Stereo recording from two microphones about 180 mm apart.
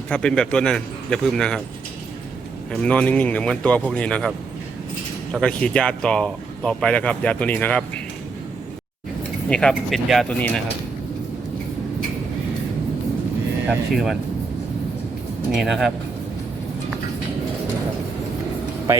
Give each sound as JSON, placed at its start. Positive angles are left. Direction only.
{"t": 0.1, "sound": "a man's voice", "side_deg": 5}
{"t": 2.7, "sound": "a man's voice", "side_deg": 5}
{"t": 9.5, "sound": "a man's voice", "side_deg": 5}
{"t": 13.7, "sound": "a man's voice", "side_deg": 0}
{"t": 15.5, "sound": "a man's voice", "side_deg": 0}